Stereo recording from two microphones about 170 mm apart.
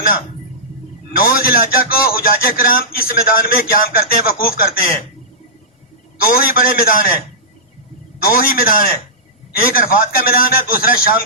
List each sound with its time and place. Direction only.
1.1 s speech: 60° left (ahead or behind)
6.2 s speech: 60° left (ahead or behind)
8.2 s speech: 60° left (ahead or behind)